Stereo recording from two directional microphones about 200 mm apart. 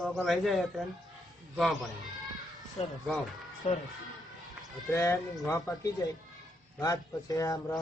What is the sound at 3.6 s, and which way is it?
Speech, 30° left (ahead or behind).